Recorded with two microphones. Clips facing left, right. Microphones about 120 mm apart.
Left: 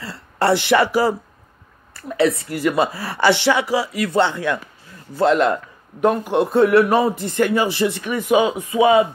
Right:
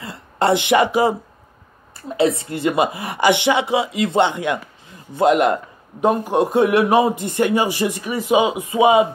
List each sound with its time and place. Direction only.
0.0 s a woman's voice: 20° right (ahead or behind)